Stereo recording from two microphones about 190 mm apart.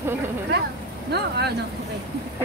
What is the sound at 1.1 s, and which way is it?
Speech, 60° right (ahead or behind).